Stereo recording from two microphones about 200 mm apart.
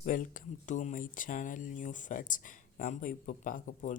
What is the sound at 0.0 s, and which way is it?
Speech, 40° left (ahead or behind).